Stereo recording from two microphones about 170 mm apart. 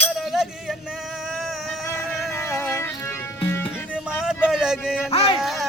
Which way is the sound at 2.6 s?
15° left (ahead or behind).